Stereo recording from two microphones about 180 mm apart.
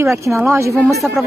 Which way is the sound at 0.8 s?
Centre (ahead or behind).